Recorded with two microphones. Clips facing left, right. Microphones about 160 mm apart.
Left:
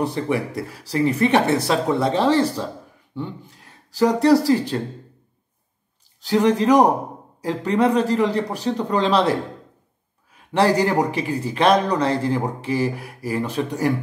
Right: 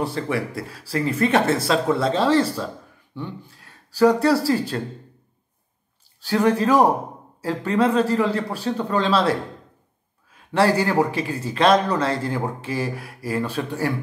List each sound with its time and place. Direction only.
0.0 s a man's voice: 20° left (ahead or behind)
4.0 s speech: 20° left (ahead or behind)
6.2 s speech: 20° left (ahead or behind)
10.5 s a man's voice: 20° left (ahead or behind)